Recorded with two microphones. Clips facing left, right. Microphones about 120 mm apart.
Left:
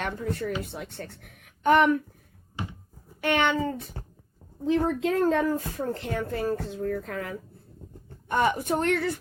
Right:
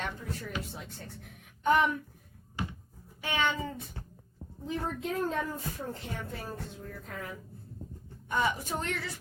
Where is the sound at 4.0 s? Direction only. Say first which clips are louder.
Left 4 dB; 40° left (ahead or behind).